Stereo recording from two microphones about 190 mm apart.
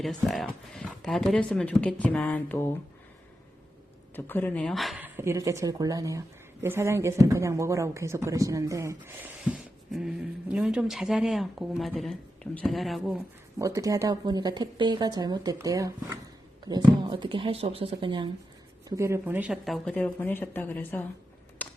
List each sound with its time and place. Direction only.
0.0 s speech: centre (ahead or behind)
4.1 s speech: 10° left (ahead or behind)
13.6 s speech: 15° right (ahead or behind)
18.9 s speech: 15° right (ahead or behind); by 21.1 s 10° left (ahead or behind)
21.6 s mechanisms: 10° left (ahead or behind)